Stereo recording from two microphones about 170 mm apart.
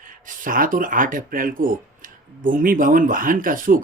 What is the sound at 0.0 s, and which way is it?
Speech, 55° right (ahead or behind).